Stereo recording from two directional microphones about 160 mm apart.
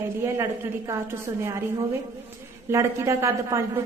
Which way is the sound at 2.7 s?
20° right (ahead or behind).